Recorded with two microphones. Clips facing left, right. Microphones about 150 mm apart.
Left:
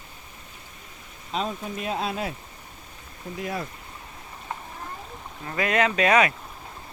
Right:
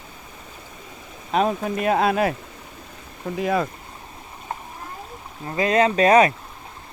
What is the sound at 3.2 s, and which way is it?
Speech, 90° right.